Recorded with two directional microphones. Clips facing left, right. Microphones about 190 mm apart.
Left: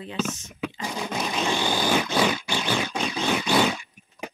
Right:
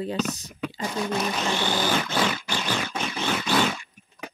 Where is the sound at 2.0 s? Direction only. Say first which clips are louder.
Left 3 dB; 10° left (ahead or behind).